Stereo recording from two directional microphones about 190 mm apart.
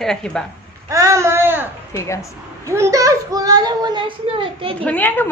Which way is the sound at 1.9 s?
15° left (ahead or behind).